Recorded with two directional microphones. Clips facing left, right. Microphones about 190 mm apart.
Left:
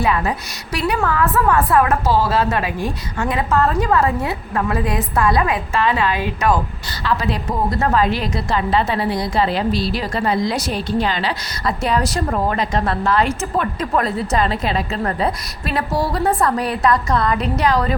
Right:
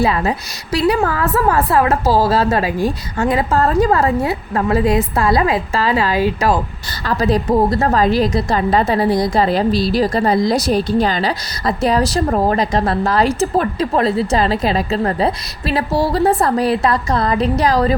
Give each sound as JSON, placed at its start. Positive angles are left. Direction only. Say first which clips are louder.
{"t": 0.0, "sound": "a woman's voice", "louder": "right 3 dB", "side_deg": -30}